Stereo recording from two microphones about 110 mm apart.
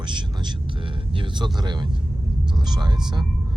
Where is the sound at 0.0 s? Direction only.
45° right (ahead or behind).